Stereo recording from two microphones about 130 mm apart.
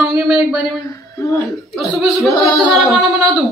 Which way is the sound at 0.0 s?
5° right (ahead or behind).